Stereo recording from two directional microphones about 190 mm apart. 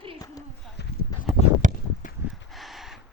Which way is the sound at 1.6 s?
45° right (ahead or behind).